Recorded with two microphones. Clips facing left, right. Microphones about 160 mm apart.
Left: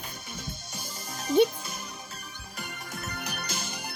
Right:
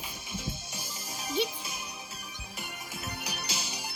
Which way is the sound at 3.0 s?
55° left (ahead or behind).